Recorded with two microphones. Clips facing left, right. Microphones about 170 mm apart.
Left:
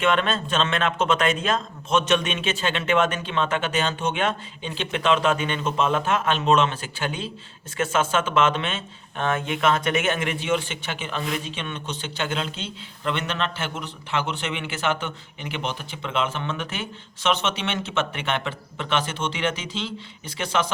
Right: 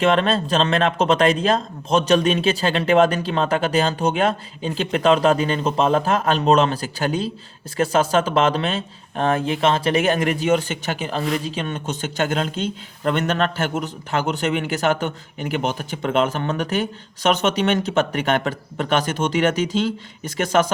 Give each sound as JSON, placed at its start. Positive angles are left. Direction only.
{"t": 0.0, "sound": "a man's voice", "side_deg": -35}